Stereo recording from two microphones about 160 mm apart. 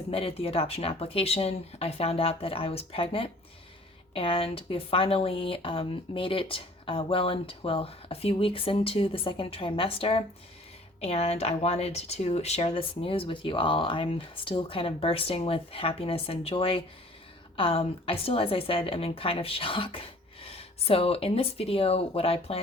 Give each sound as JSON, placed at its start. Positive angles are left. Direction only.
{"t": 0.1, "sound": "speech", "side_deg": 35}